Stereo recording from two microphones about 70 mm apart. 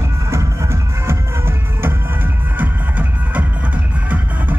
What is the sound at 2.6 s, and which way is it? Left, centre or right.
Music, right.